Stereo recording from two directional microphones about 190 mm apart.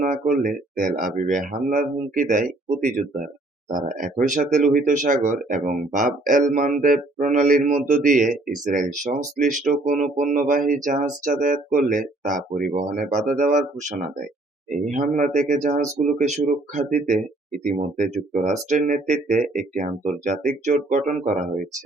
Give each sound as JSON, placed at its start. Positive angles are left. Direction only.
{"t": 0.0, "sound": "speech", "side_deg": -45}